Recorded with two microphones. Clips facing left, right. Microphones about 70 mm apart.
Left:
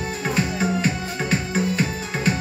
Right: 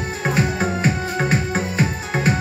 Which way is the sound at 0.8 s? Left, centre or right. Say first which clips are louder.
Right 4 dB; right.